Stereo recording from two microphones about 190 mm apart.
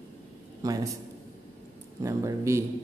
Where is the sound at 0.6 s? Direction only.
20° right (ahead or behind).